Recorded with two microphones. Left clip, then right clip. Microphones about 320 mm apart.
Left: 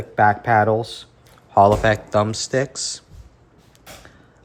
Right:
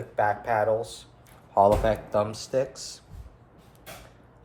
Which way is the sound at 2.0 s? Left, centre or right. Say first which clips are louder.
Left 7 dB; left.